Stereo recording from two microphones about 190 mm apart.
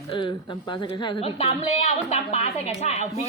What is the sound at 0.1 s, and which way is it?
A woman's voice, 25° left (ahead or behind).